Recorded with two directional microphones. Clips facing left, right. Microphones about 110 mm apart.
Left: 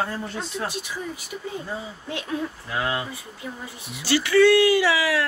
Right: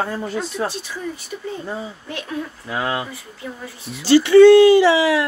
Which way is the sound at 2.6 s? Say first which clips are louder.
Right 5 dB; 25° right (ahead or behind).